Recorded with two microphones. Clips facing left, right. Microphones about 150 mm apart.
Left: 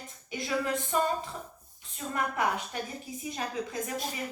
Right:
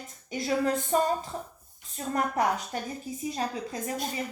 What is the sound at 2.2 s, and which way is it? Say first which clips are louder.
A woman's voice: right 3 dB; 40° right (ahead or behind).